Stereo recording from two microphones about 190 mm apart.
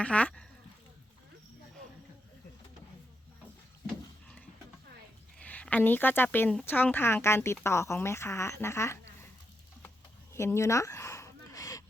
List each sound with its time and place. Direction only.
0.0 s speech: 5° left (ahead or behind)
5.4 s speech: 5° left (ahead or behind)
10.3 s a sound: 15° left (ahead or behind)